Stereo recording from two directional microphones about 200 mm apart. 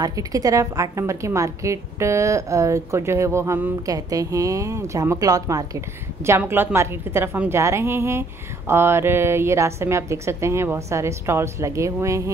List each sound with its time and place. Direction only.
0.0 s a woman's voice: 15° right (ahead or behind)